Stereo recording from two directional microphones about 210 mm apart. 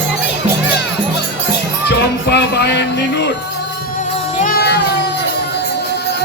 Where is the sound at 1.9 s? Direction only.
50° left (ahead or behind).